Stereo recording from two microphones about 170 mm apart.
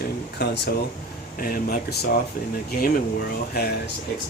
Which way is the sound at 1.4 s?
55° left (ahead or behind).